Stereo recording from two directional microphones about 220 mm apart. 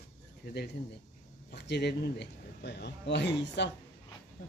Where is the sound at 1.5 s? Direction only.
50° left (ahead or behind).